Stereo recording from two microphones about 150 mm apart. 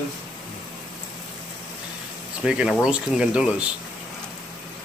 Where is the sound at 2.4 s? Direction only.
5° right (ahead or behind).